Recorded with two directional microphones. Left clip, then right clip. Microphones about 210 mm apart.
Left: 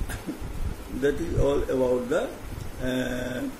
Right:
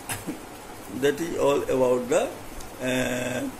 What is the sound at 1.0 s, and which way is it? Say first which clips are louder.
Speech: right 2 dB; 15° left (ahead or behind).